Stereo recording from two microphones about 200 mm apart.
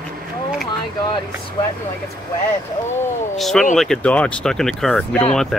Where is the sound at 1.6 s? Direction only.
20° left (ahead or behind).